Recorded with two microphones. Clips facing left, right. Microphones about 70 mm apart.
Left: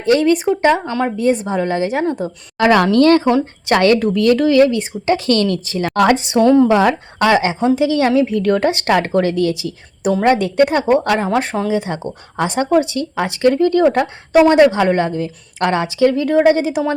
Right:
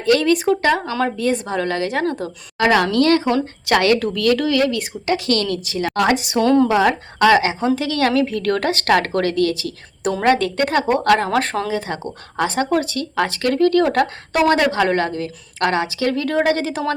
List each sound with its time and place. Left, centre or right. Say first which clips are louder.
0.0 s speech: left 2 dB; left
2.6 s speech: left 4 dB; left
6.4 s speech: left 4 dB; centre
6.7 s speech: left 3 dB; left
10.0 s a woman's voice: left 3 dB; centre
11.7 s speech: left 4 dB; left